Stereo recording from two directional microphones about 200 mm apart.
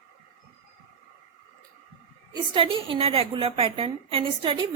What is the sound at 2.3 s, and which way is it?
A woman's voice, 25° right (ahead or behind).